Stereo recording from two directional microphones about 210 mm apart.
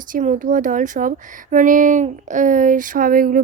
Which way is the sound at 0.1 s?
35° right (ahead or behind).